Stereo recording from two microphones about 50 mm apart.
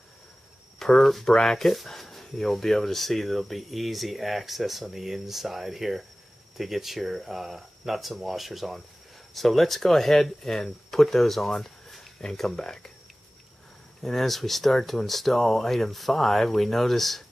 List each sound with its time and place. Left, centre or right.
0.7 s speech: centre
14.0 s speech: centre